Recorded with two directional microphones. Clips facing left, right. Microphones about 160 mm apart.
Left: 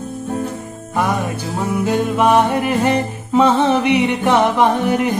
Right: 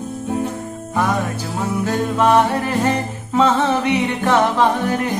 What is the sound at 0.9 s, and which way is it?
Music, 15° left (ahead or behind).